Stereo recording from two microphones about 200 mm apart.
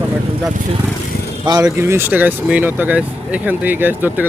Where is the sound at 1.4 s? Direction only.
20° right (ahead or behind).